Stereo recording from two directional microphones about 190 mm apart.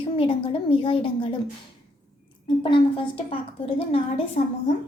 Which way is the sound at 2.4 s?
25° left (ahead or behind).